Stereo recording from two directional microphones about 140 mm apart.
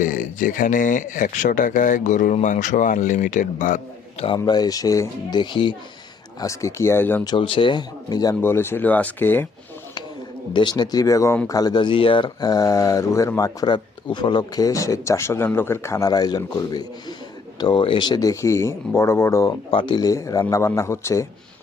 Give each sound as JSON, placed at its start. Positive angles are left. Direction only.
{"t": 0.0, "sound": "speech", "side_deg": 70}
{"t": 4.4, "sound": "speech", "side_deg": 30}
{"t": 6.4, "sound": "speech", "side_deg": 20}
{"t": 7.3, "sound": "speech", "side_deg": 40}
{"t": 8.4, "sound": "speech", "side_deg": 15}
{"t": 10.5, "sound": "speech", "side_deg": 35}
{"t": 19.7, "sound": "speech", "side_deg": 35}